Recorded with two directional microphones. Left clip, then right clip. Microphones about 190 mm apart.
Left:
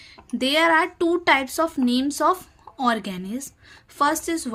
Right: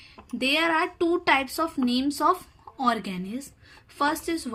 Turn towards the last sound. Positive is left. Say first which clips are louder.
# left 4 dB
turn(degrees=30)  # may be behind; listen again after turning